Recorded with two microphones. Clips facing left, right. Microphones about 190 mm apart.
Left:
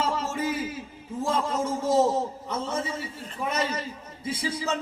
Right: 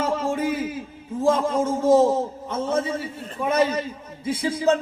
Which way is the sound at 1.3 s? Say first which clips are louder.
Right 6 dB; 55° right (ahead or behind).